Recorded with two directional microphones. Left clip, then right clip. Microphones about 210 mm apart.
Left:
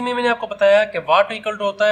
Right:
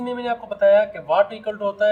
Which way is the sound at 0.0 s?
50° left (ahead or behind).